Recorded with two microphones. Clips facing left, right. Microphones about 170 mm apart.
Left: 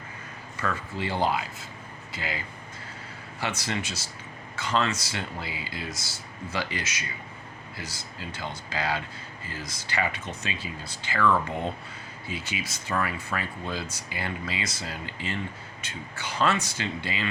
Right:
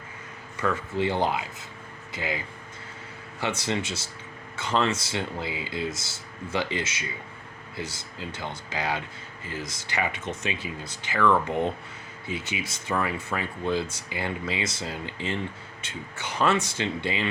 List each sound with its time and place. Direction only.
0.6 s speech: 20° right (ahead or behind)
3.4 s speech: 20° right (ahead or behind)